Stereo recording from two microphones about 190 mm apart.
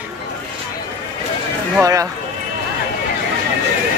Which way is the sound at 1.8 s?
15° right (ahead or behind).